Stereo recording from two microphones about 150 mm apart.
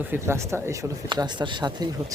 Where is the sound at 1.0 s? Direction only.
30° right (ahead or behind).